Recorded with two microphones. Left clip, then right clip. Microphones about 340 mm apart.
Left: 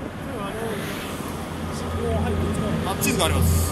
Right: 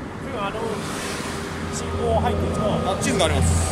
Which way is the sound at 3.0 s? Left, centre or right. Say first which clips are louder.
Even; centre.